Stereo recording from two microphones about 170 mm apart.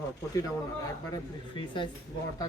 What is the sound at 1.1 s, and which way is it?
Speech, 30° left (ahead or behind).